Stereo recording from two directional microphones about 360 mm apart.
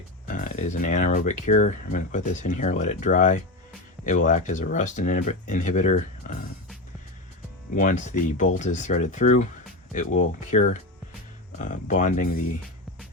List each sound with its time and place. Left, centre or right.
0.3 s speech: left
7.8 s speech: left